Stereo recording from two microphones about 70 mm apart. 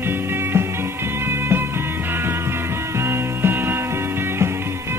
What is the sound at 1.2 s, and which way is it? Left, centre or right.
Music, right.